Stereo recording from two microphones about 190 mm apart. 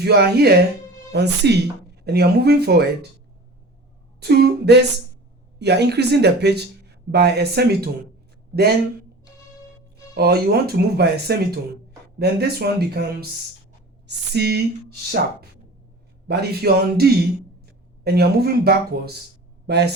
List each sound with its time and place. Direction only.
0.0 s speech: 55° right (ahead or behind)
4.2 s speech: 60° right (ahead or behind)
10.2 s speech: 55° right (ahead or behind)
16.2 s speech: 60° right (ahead or behind)